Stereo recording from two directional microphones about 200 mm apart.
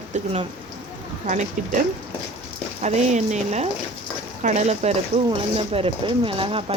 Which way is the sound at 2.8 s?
35° right (ahead or behind).